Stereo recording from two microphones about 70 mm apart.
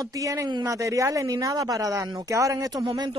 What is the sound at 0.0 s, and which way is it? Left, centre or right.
Speech, right.